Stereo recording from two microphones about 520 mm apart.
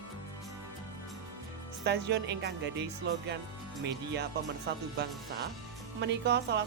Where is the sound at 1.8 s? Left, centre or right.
Centre.